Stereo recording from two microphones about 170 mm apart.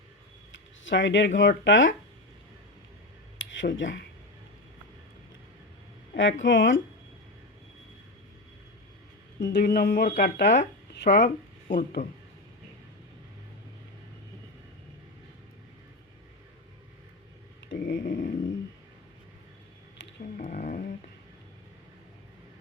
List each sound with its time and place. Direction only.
0.5 s a sound: 90° left
1.4 s speech: 90° left
3.3 s a sound: 90° left
6.1 s speech: 90° left
9.4 s speech: 70° left (ahead or behind)
12.0 s speech: 40° left (ahead or behind)
17.7 s dog: 90° left
18.0 s a sound: 50° left (ahead or behind)
20.3 s dog: 50° left (ahead or behind)